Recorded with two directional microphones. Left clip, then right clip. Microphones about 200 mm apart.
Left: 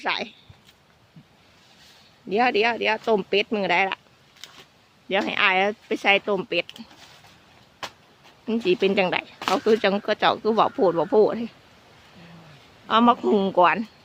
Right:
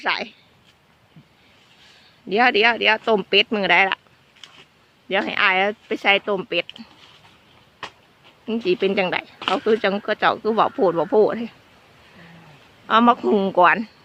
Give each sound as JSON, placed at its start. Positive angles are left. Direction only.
{"t": 0.0, "sound": "speech", "side_deg": 0}
{"t": 2.3, "sound": "speech", "side_deg": -10}
{"t": 5.0, "sound": "speech", "side_deg": 0}
{"t": 8.4, "sound": "speech", "side_deg": 0}
{"t": 9.4, "sound": "speech", "side_deg": 25}
{"t": 9.6, "sound": "speech", "side_deg": 0}
{"t": 12.9, "sound": "speech", "side_deg": -5}